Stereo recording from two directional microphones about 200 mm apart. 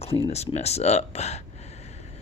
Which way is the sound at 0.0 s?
30° left (ahead or behind).